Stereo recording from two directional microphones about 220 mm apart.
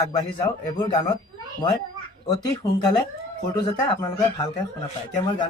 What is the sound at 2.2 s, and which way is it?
A man's voice, 15° left (ahead or behind).